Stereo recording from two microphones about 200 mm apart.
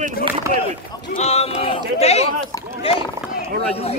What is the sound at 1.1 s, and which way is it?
Speech, 30° left (ahead or behind).